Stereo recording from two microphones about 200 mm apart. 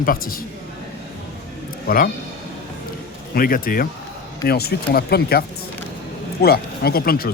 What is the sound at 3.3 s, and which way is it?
Speech, 45° left (ahead or behind).